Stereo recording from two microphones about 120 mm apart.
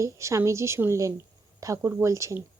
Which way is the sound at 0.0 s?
25° right (ahead or behind).